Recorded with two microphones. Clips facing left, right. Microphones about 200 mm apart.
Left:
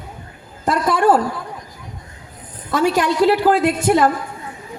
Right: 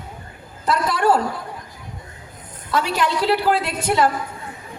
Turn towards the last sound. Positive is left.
turn(degrees=45)  # may be behind; listen again after turning